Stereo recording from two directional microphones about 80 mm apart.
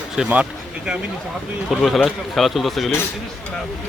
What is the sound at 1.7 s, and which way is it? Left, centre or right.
A man's voice, centre.